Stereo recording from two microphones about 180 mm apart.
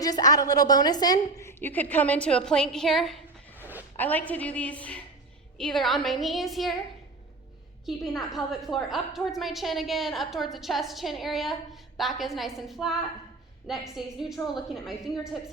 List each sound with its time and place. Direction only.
0.0 s a woman's voice: 20° left (ahead or behind); by 3.2 s centre (ahead or behind)
3.6 s a sound: 10° right (ahead or behind)
3.9 s a woman's voice: 10° left (ahead or behind)
7.9 s a woman's voice: centre (ahead or behind)